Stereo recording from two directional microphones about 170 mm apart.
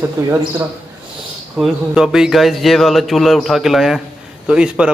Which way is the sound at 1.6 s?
5° right (ahead or behind).